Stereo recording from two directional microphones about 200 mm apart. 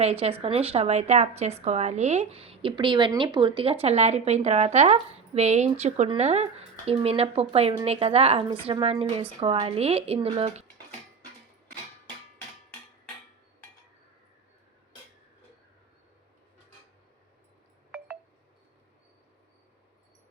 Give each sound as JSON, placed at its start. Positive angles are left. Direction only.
{"t": 0.0, "sound": "speech", "side_deg": -30}